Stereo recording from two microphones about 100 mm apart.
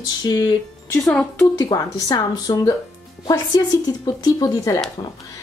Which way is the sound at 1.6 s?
40° left (ahead or behind).